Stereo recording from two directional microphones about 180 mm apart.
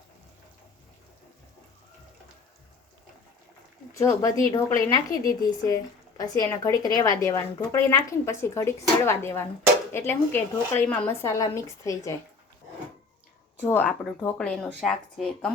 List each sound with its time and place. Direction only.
3.9 s a woman's voice: 20° left (ahead or behind)
13.7 s speech: 10° left (ahead or behind)